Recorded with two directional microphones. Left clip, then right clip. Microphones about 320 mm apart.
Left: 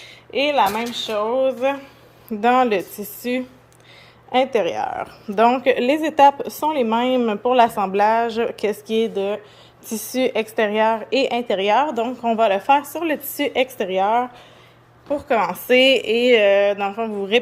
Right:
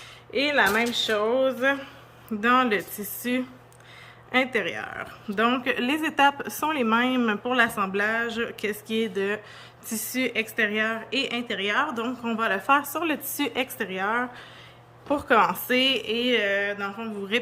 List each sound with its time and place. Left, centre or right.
0.3 s speech: centre
0.9 s speech: centre
4.3 s a woman's voice: centre
13.4 s speech: centre
13.7 s a woman's voice: centre